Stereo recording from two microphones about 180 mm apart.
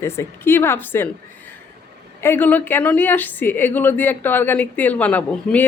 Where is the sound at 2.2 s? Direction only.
10° left (ahead or behind).